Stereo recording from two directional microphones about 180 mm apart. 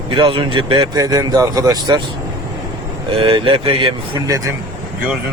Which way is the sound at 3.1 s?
30° right (ahead or behind).